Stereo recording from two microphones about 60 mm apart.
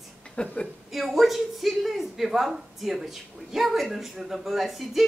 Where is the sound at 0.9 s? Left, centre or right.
Centre.